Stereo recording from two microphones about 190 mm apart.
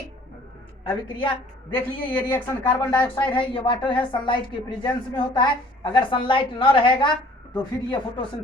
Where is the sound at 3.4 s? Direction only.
25° left (ahead or behind).